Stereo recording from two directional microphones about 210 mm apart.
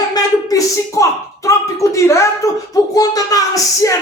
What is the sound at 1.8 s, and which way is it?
Speech, 15° left (ahead or behind).